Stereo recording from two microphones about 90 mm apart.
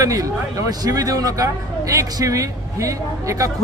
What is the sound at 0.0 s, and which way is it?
A man's voice, 40° right (ahead or behind).